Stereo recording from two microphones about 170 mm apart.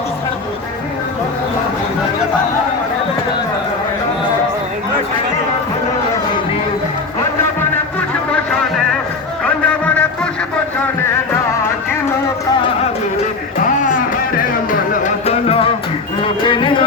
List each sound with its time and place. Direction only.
8.3 s music: 5° left (ahead or behind)
14.3 s music: 50° left (ahead or behind); by 16.8 s 30° left (ahead or behind)